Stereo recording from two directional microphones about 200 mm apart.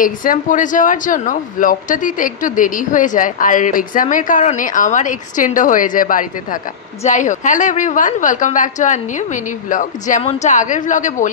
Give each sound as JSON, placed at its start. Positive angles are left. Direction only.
{"t": 0.0, "sound": "speech", "side_deg": 45}